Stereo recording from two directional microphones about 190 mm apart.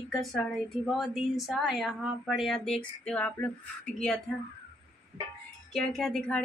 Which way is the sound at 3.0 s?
5° left (ahead or behind).